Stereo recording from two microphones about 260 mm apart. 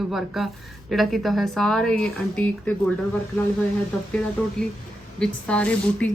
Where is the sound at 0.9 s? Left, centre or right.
Centre.